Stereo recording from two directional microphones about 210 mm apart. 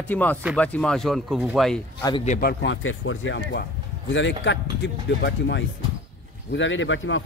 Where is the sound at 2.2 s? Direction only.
40° left (ahead or behind).